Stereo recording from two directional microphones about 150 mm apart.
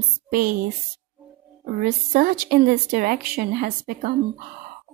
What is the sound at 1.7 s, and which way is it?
A woman's voice, 80° right.